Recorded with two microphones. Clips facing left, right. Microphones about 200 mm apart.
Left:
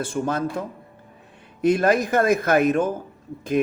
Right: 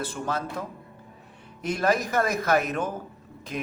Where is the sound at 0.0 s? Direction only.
50° left (ahead or behind).